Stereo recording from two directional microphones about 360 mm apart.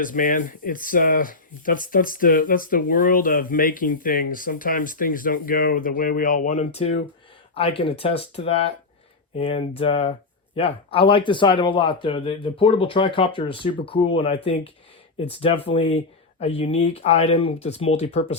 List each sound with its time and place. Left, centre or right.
0.0 s speech: left